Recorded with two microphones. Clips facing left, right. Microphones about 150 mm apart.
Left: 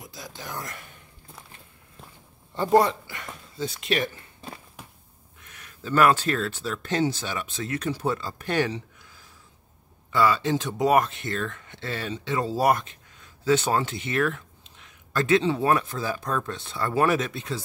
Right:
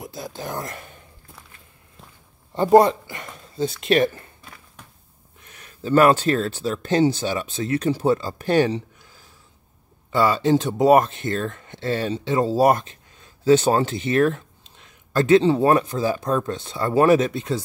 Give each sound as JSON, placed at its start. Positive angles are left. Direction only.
{"t": 0.3, "sound": "speech", "side_deg": -45}
{"t": 0.6, "sound": "speech", "side_deg": -30}
{"t": 2.5, "sound": "speech", "side_deg": -30}
{"t": 3.5, "sound": "speech", "side_deg": -40}
{"t": 5.4, "sound": "speech", "side_deg": -30}
{"t": 10.1, "sound": "speech", "side_deg": -35}
{"t": 17.3, "sound": "speech", "side_deg": -45}